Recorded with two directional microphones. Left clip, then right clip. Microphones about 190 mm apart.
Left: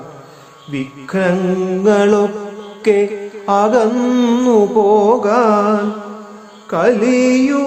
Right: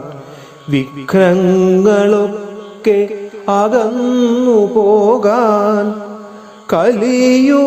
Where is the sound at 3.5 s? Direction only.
25° right (ahead or behind).